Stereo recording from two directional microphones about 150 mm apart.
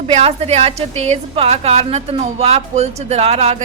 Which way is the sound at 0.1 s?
45° right (ahead or behind).